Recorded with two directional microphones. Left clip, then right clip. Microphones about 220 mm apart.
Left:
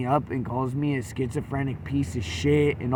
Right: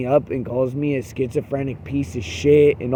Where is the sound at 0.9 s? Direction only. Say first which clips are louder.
Right 7 dB; 55° left (ahead or behind).